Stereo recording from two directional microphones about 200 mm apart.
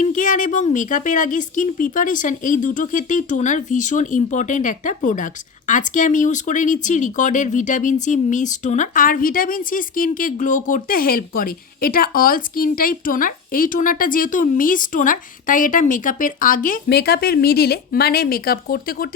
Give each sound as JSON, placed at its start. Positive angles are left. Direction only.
{"t": 0.0, "sound": "a woman's voice", "side_deg": 40}